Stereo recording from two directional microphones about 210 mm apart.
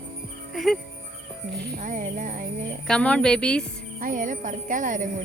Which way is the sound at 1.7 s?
35° right (ahead or behind).